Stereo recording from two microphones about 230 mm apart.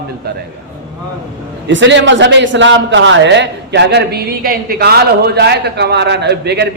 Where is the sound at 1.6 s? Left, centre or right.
Right.